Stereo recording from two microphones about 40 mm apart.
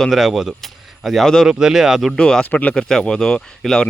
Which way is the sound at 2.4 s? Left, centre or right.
Left.